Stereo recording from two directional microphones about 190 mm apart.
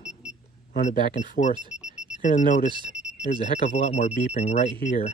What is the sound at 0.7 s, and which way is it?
Speech, 40° left (ahead or behind).